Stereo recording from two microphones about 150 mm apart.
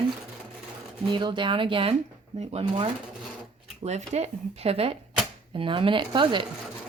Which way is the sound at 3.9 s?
50° right (ahead or behind).